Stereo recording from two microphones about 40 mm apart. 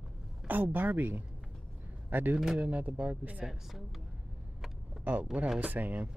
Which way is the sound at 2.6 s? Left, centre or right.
Right.